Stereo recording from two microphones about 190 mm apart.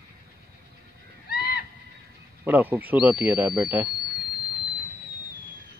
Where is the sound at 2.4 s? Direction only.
10° right (ahead or behind).